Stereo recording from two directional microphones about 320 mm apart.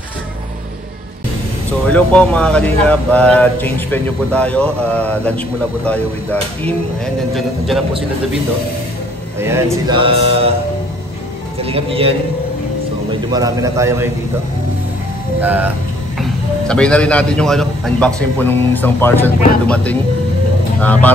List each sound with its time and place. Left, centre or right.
1.9 s a man's voice: centre
7.3 s a man's voice: centre
9.4 s speech: centre
11.6 s speech: centre
13.3 s speech: centre
15.4 s a man's voice: centre